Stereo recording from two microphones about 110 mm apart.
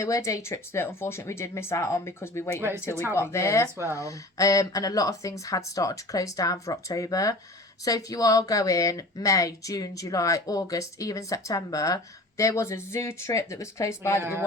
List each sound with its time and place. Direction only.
0.0 s speech: 30° left (ahead or behind)
2.6 s speech: 20° right (ahead or behind)
3.2 s speech: 25° left (ahead or behind)
14.2 s speech: 20° right (ahead or behind)